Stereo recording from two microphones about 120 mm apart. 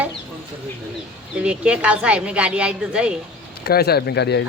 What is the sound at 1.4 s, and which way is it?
A woman's voice, 10° right (ahead or behind).